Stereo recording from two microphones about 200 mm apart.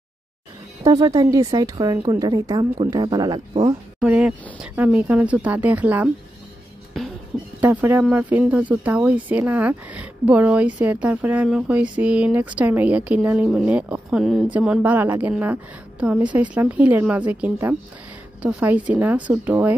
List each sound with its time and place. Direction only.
0.8 s a woman's voice: 20° right (ahead or behind)
4.0 s speech: 5° right (ahead or behind)
7.0 s a sound: centre (ahead or behind)
7.6 s speech: 10° right (ahead or behind)